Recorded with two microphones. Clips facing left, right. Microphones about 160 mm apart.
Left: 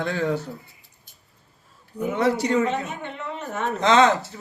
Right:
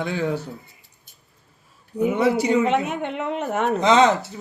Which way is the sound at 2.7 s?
65° right (ahead or behind).